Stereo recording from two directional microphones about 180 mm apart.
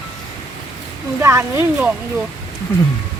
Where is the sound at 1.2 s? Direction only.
15° right (ahead or behind).